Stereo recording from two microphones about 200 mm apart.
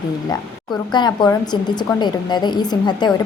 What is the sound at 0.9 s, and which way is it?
A woman's voice, 20° left (ahead or behind).